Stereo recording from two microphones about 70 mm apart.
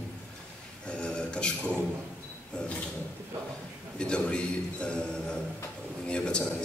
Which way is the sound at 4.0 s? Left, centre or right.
Centre.